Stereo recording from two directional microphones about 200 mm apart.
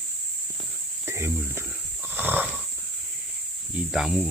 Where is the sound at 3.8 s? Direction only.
Centre (ahead or behind).